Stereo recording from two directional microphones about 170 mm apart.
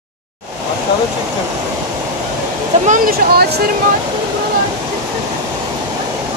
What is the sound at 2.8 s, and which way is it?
Speech, 50° right (ahead or behind).